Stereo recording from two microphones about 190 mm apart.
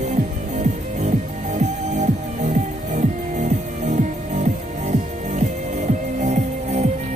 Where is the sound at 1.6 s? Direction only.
40° right (ahead or behind).